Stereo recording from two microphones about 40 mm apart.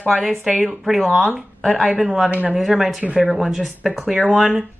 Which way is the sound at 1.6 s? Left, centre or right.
Centre.